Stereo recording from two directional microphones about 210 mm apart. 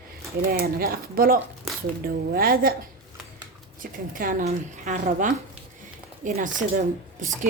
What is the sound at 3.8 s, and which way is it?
Speech, 40° right (ahead or behind).